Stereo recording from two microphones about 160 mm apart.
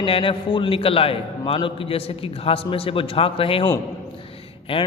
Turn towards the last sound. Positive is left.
turn(degrees=35)  # may be behind; listen again after turning